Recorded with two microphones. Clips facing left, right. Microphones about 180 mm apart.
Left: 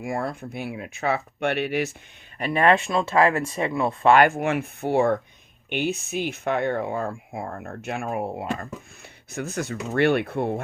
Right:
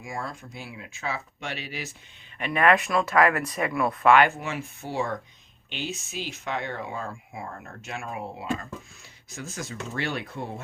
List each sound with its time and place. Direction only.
0.0 s speech: 60° left (ahead or behind)
2.4 s speech: 30° left (ahead or behind)
4.2 s speech: 50° left (ahead or behind)